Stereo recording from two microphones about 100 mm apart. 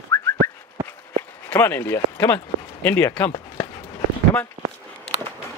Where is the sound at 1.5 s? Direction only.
20° left (ahead or behind).